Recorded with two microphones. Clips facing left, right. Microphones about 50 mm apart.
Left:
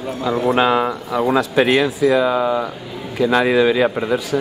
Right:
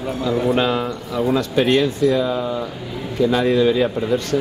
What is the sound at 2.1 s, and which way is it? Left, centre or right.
Speech, left.